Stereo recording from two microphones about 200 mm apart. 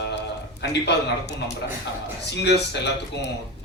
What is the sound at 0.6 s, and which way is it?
Speech, 60° left (ahead or behind).